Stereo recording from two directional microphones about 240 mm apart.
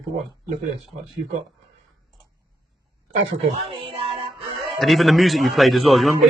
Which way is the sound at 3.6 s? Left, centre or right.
Right.